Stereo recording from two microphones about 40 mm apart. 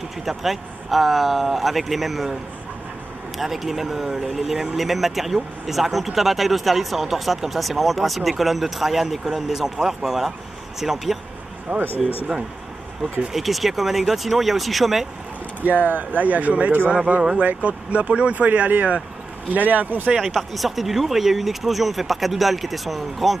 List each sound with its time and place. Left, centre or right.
0.2 s speech: centre
3.3 s speech: centre
11.7 s speech: right
13.3 s speech: centre
15.6 s speech: right
20.2 s speech: centre